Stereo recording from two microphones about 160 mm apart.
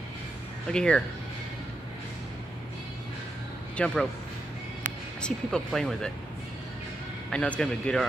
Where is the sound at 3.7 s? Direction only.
5° left (ahead or behind).